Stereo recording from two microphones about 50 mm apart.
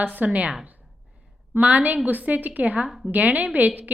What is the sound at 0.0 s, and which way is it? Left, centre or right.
Speech, right.